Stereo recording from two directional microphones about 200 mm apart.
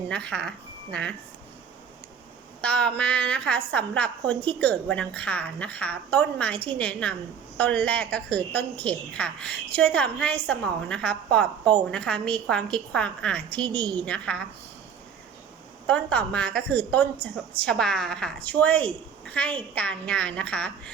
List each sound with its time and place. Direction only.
0.1 s speech: 5° left (ahead or behind)
2.6 s a woman's voice: 5° left (ahead or behind)
15.9 s a woman's voice: 5° left (ahead or behind)